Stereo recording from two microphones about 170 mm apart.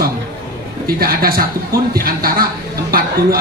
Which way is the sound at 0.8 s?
60° right (ahead or behind).